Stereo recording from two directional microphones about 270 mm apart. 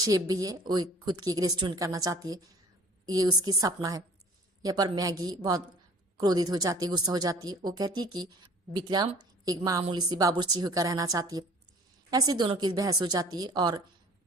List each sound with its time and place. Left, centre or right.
0.0 s speech: centre